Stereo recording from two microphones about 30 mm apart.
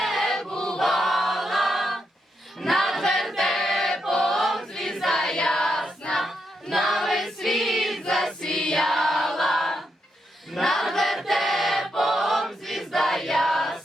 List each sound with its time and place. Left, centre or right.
0.0 s choir: centre
0.5 s choir: left
0.8 s choir: centre
2.6 s music: centre
3.0 s choir: centre
5.5 s a sound: centre
6.2 s choir: centre
8.3 s choir: centre